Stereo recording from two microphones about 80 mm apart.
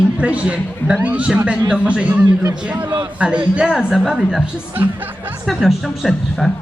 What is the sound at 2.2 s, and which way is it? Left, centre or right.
Speech, right.